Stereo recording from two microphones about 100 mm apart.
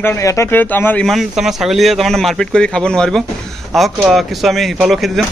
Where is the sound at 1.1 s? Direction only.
Centre (ahead or behind).